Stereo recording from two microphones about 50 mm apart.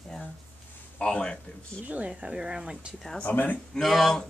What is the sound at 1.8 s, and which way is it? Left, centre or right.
Speech, right.